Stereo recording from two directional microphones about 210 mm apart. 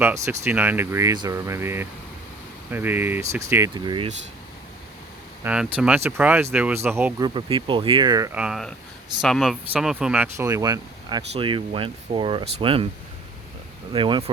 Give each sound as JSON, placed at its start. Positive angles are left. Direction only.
{"t": 0.0, "sound": "speech", "side_deg": -10}
{"t": 5.4, "sound": "speech", "side_deg": -5}
{"t": 7.3, "sound": "speech", "side_deg": -25}
{"t": 13.9, "sound": "speech", "side_deg": -25}